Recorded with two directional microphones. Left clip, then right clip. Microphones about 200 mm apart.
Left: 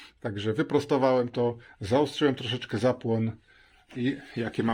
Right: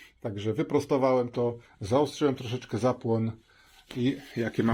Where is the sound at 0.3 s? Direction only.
15° left (ahead or behind).